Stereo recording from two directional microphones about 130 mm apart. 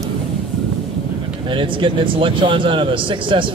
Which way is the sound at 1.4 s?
40° right (ahead or behind).